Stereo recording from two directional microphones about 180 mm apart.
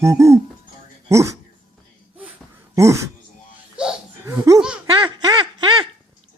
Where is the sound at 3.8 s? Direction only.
5° right (ahead or behind).